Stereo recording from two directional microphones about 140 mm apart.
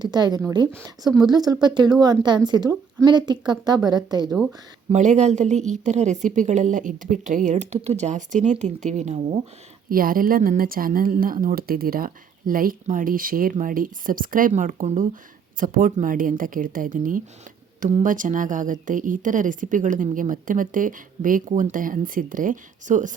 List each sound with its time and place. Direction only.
0.0 s speech: 30° right (ahead or behind)
4.9 s a woman's voice: 55° right (ahead or behind)
9.9 s a woman's voice: 90° right; by 15.0 s 70° right (ahead or behind)
15.6 s a woman's voice: 80° right; by 23.1 s 65° right (ahead or behind)